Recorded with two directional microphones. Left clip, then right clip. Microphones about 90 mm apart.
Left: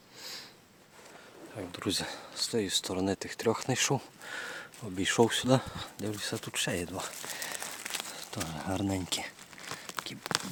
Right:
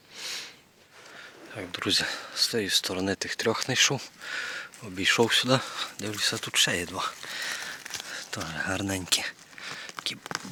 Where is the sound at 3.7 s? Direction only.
40° left (ahead or behind).